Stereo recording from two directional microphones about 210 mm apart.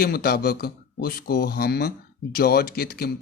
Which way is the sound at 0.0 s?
45° left (ahead or behind).